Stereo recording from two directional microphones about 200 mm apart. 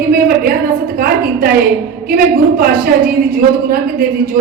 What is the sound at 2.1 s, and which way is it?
A woman's voice, 45° right (ahead or behind).